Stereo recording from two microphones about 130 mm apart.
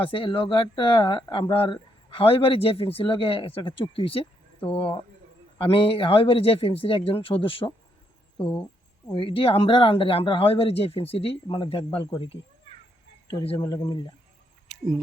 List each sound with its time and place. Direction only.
0.0 s speech: 45° left (ahead or behind)
9.1 s speech: 45° left (ahead or behind)
13.6 s speech: 30° left (ahead or behind)
14.7 s rodents: 5° right (ahead or behind)